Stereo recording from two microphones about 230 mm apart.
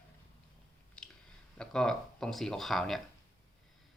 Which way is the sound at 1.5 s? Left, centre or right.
Centre.